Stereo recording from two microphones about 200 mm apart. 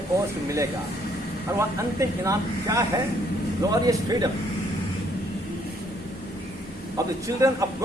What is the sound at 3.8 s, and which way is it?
Speech, 20° right (ahead or behind).